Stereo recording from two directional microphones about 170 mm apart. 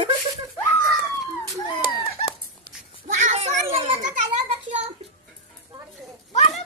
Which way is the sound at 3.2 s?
40° right (ahead or behind).